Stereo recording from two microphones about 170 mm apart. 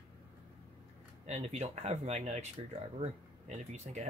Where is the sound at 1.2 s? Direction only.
40° right (ahead or behind).